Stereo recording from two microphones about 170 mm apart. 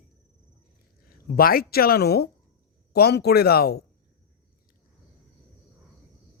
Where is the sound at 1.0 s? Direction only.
60° left (ahead or behind).